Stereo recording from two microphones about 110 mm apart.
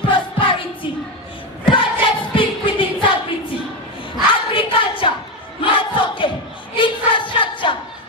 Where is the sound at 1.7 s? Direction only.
50° left (ahead or behind).